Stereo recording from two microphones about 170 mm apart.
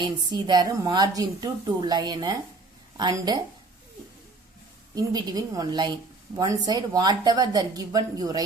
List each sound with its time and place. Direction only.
0.3 s a woman's voice: 25° right (ahead or behind)
4.9 s a woman's voice: 20° right (ahead or behind)